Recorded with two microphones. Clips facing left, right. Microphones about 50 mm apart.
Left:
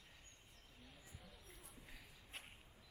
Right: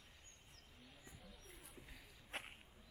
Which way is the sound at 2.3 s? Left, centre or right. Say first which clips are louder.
Right 7 dB; right.